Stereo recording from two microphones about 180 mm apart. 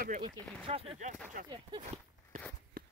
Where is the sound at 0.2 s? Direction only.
30° right (ahead or behind).